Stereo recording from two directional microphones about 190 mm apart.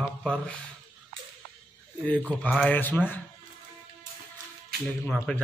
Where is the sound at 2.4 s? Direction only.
5° left (ahead or behind).